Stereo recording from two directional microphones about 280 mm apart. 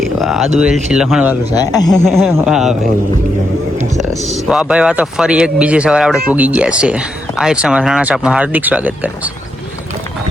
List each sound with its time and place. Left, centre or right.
0.0 s speech: centre
1.5 s speech: centre
2.0 s speech: centre
4.1 s speech: centre